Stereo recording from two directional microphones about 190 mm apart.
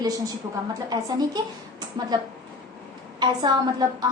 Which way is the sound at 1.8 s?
20° right (ahead or behind).